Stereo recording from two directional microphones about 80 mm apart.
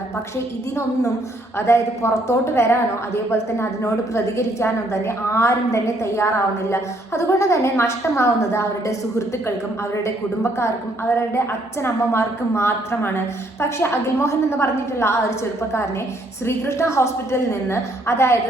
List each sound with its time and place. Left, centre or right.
1.5 s a woman's voice: left
16.5 s a woman's voice: left